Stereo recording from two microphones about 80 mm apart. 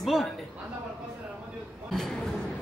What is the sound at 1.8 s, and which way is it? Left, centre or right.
Speech, centre.